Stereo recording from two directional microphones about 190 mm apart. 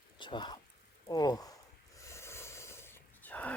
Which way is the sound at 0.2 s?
25° left (ahead or behind).